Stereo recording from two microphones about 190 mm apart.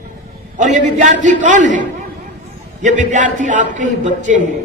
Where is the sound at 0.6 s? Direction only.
40° right (ahead or behind).